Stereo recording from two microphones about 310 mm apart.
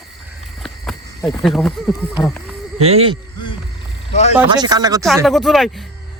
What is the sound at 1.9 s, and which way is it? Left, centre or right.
Speech, centre.